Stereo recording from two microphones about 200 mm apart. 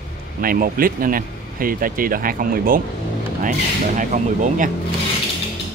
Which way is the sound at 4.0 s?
40° right (ahead or behind).